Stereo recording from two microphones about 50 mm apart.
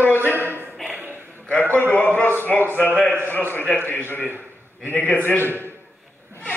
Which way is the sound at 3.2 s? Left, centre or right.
Left.